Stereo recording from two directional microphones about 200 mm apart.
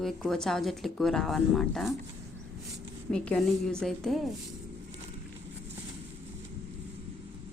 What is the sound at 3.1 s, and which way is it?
A woman's voice, 5° left (ahead or behind).